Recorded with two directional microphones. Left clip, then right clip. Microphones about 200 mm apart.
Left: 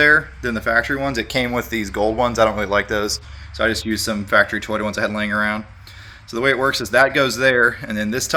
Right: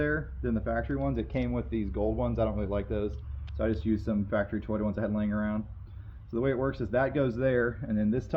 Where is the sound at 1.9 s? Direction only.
35° left (ahead or behind).